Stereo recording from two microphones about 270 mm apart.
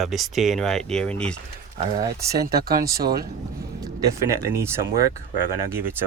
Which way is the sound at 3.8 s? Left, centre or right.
Centre.